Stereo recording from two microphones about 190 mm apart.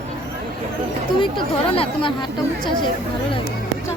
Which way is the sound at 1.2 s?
30° left (ahead or behind).